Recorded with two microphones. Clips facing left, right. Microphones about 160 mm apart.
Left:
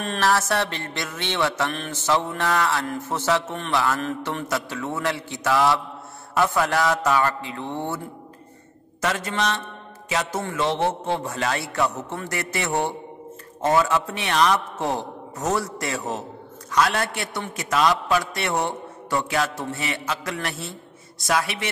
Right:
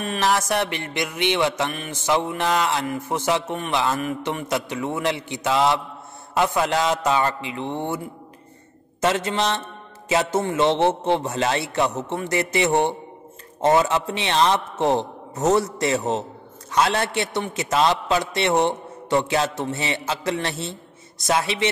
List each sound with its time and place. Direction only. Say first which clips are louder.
0.2 s mantra: even; 15° right (ahead or behind)
6.3 s a man's voice: right 1 dB; 20° right (ahead or behind)
9.0 s a man's voice: right 3 dB; 25° right (ahead or behind)